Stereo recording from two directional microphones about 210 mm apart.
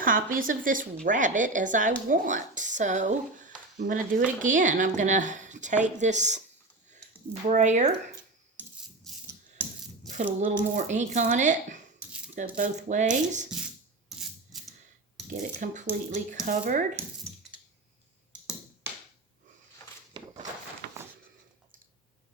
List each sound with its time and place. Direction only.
0.0 s speech: 40° right (ahead or behind)
7.4 s speech: 35° right (ahead or behind)
9.1 s rattle: centre (ahead or behind)
10.4 s speech: 35° right (ahead or behind)
15.3 s speech: 35° right (ahead or behind)